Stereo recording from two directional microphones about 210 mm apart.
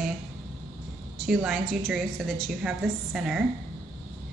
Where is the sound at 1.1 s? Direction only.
Centre (ahead or behind).